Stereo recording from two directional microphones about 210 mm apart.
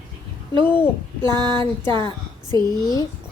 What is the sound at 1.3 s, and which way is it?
A woman's voice, 20° right (ahead or behind).